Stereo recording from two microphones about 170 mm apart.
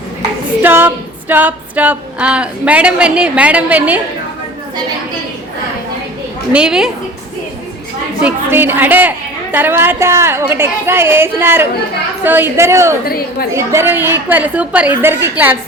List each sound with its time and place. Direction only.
0.2 s female singing: 15° right (ahead or behind)
6.5 s a woman's voice: 5° right (ahead or behind)
8.2 s a woman's voice: 10° right (ahead or behind)